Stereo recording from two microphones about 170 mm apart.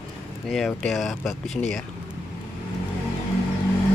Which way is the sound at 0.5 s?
Centre (ahead or behind).